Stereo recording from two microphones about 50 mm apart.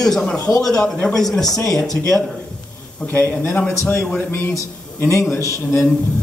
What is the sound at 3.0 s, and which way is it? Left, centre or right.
Speech, left.